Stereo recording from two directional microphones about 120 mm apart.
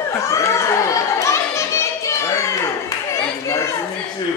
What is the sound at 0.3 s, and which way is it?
Children playing, 25° left (ahead or behind).